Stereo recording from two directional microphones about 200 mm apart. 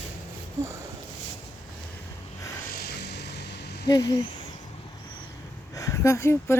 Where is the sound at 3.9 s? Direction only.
20° left (ahead or behind).